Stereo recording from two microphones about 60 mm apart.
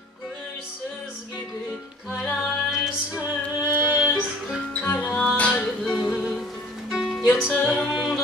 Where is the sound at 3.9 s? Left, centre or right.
Centre.